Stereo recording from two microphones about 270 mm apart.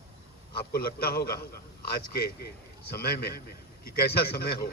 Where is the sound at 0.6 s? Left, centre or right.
Left.